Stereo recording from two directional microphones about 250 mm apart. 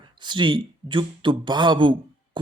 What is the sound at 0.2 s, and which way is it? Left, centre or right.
A man's voice, centre.